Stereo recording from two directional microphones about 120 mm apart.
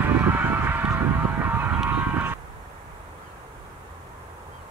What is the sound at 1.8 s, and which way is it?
Honk, 15° right (ahead or behind).